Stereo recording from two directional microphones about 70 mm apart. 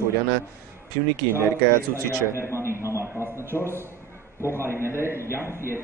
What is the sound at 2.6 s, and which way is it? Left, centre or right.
Speech, right.